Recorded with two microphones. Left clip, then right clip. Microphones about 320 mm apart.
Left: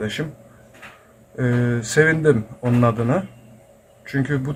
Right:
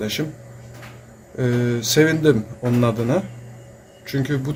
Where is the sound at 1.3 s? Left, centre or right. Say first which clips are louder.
Right 1 dB; centre.